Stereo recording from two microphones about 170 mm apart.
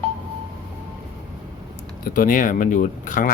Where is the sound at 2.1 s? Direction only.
50° left (ahead or behind).